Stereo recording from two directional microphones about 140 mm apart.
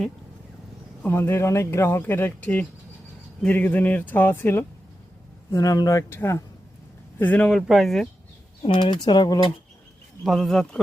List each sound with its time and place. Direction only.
1.0 s speech: 15° left (ahead or behind)
5.5 s speech: 25° left (ahead or behind); by 8.0 s centre (ahead or behind)
8.6 s speech: 35° left (ahead or behind)
10.2 s speech: 5° left (ahead or behind)